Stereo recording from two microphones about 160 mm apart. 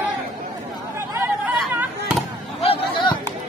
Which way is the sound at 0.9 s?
15° right (ahead or behind).